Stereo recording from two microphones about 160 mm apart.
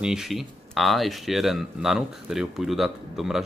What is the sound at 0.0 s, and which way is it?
Speech, 5° right (ahead or behind).